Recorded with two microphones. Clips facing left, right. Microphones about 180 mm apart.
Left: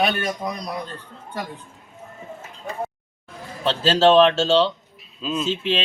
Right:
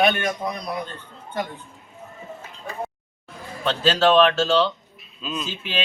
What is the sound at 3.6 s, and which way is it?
Speech, 30° left (ahead or behind).